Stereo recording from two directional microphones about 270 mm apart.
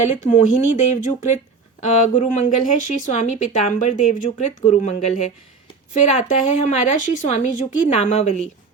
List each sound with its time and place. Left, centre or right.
0.2 s speech: left